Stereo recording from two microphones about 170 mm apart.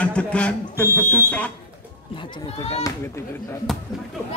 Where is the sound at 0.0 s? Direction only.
5° left (ahead or behind).